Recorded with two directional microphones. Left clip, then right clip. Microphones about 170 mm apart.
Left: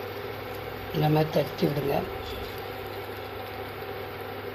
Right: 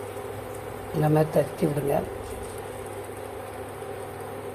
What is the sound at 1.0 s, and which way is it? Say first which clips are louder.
Speech: right 2 dB; 15° right (ahead or behind).